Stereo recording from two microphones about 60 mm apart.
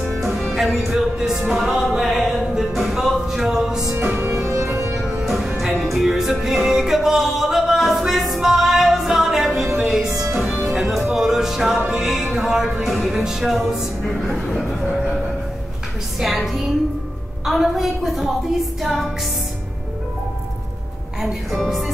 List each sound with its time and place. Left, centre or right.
0.1 s music: centre
4.5 s music: right
5.2 s music: centre
14.0 s a woman's voice: centre
16.2 s a woman's voice: centre
21.5 s a woman's voice: centre